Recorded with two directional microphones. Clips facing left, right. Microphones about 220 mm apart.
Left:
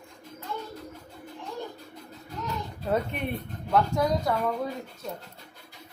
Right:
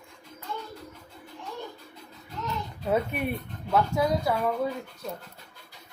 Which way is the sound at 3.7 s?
Centre (ahead or behind).